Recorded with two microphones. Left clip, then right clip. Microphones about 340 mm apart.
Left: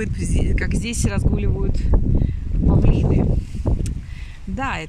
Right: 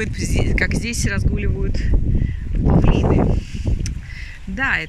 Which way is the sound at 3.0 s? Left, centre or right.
Right.